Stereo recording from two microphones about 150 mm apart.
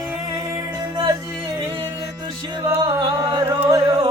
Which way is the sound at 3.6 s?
25° right (ahead or behind).